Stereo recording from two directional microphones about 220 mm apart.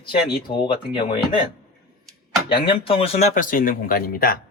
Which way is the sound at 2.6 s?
25° left (ahead or behind).